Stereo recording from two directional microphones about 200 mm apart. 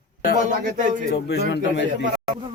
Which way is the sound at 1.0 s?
55° left (ahead or behind).